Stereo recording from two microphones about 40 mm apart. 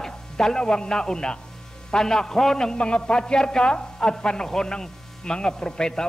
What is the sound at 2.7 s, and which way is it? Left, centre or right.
A man's voice, left.